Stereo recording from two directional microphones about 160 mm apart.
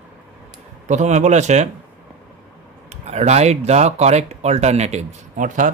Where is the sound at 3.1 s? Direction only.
45° right (ahead or behind).